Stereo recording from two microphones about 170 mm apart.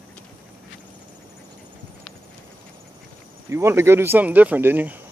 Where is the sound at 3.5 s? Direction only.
15° right (ahead or behind).